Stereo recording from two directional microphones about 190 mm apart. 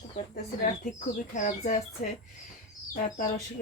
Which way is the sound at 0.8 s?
40° left (ahead or behind).